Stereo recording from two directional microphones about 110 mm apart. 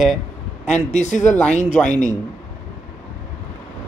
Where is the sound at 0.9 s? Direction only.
90° left.